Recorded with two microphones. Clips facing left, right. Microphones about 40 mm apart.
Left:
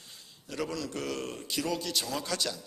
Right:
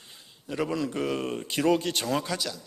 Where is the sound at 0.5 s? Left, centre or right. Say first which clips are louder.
Right 6 dB; right.